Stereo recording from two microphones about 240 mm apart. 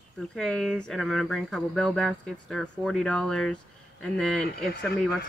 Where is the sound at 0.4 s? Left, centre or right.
Centre.